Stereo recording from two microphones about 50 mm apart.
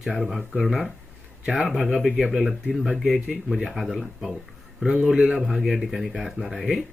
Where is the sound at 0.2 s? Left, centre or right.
Centre.